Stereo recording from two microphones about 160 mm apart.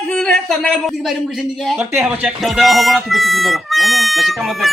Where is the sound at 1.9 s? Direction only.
15° right (ahead or behind).